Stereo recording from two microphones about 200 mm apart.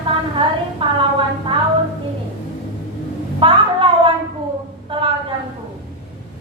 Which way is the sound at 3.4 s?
25° right (ahead or behind).